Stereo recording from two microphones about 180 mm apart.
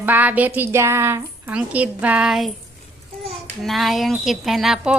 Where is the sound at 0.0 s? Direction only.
10° right (ahead or behind).